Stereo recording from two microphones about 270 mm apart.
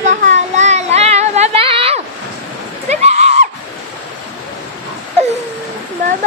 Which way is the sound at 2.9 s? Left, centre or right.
Right.